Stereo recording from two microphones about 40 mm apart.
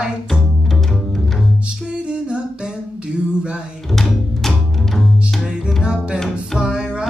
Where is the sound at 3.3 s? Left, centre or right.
Right.